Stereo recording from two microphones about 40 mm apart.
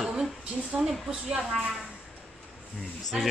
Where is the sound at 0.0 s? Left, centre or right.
Centre.